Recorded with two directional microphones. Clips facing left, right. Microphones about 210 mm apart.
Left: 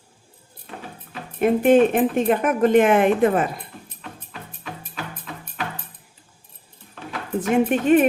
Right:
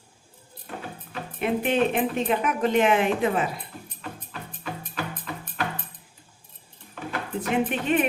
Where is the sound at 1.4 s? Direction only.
50° left (ahead or behind).